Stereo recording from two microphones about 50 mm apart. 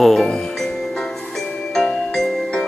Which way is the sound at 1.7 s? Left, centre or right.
Centre.